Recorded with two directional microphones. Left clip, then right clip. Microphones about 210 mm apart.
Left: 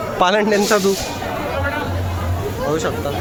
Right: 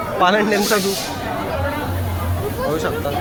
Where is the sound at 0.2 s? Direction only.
35° left (ahead or behind).